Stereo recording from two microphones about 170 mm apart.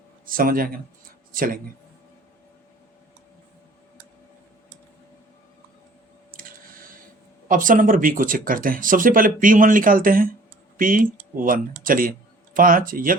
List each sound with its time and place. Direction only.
0.3 s speech: 55° right (ahead or behind)
6.3 s squish: 55° right (ahead or behind)
7.4 s speech: 55° right (ahead or behind)